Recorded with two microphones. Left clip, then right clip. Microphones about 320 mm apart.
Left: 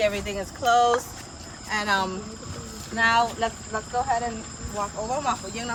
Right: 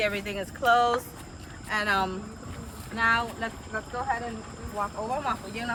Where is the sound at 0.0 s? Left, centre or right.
Centre.